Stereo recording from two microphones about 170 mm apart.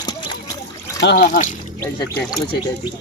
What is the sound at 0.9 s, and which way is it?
Speech, 90° left.